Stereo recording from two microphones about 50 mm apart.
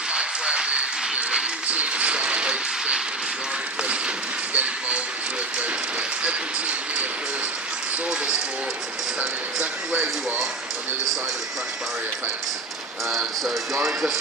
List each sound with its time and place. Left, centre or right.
0.1 s applause: centre
1.7 s a sound: right
4.5 s speech: right
6.2 s speech: right
9.9 s speech: right
13.1 s speech: centre